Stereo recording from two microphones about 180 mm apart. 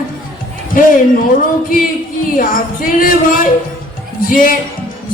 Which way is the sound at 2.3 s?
50° left (ahead or behind).